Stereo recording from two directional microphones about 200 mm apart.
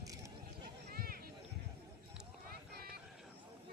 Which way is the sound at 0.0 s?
15° right (ahead or behind).